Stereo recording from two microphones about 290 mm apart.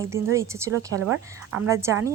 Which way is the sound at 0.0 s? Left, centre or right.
Centre.